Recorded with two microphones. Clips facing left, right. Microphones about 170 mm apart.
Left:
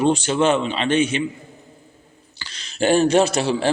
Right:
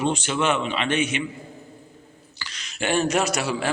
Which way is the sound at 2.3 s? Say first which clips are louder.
Left 8 dB; 30° left (ahead or behind).